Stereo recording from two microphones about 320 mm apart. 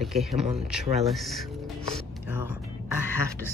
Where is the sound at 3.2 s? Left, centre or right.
Centre.